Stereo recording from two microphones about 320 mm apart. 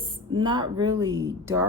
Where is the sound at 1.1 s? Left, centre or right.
Right.